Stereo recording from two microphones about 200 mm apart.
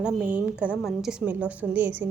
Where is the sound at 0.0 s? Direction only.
5° right (ahead or behind).